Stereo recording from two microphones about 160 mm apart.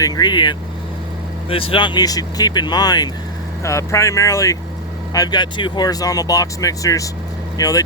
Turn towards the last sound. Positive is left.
turn(degrees=20)  # may be behind; listen again after turning